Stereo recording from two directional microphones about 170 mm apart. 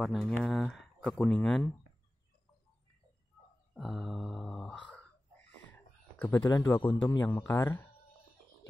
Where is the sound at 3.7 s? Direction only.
Centre (ahead or behind).